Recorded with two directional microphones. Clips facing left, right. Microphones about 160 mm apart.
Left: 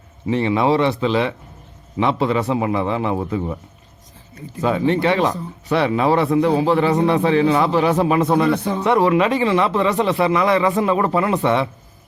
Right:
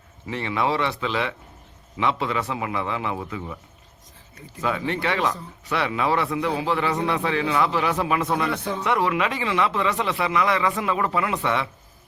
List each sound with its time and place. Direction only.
0.3 s speech: 25° left (ahead or behind)
4.6 s speech: 30° left (ahead or behind)